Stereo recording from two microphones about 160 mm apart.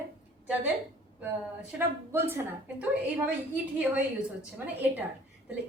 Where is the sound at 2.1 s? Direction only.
15° right (ahead or behind).